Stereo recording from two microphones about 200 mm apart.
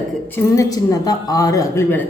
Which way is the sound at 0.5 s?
15° left (ahead or behind).